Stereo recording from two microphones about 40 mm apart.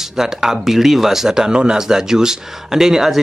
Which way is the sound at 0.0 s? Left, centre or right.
Centre.